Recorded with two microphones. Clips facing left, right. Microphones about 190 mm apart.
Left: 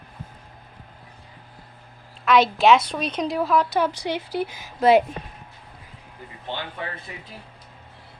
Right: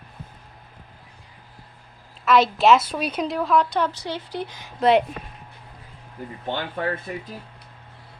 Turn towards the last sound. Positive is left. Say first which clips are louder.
# right 6 dB
turn(degrees=-50)  # may be behind; listen again after turning